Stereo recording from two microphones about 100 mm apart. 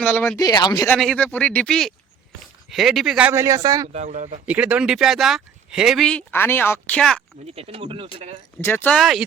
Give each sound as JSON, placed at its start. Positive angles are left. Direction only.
{"t": 0.0, "sound": "speech", "side_deg": 15}
{"t": 0.3, "sound": "speech", "side_deg": 40}
{"t": 0.9, "sound": "speech", "side_deg": 5}
{"t": 1.2, "sound": "speech", "side_deg": 15}
{"t": 3.3, "sound": "speech", "side_deg": -30}
{"t": 4.4, "sound": "speech", "side_deg": -15}
{"t": 6.3, "sound": "a woman's voice", "side_deg": 20}
{"t": 7.4, "sound": "speech", "side_deg": -90}
{"t": 8.6, "sound": "a woman's voice", "side_deg": 20}
{"t": 9.0, "sound": "speech", "side_deg": 0}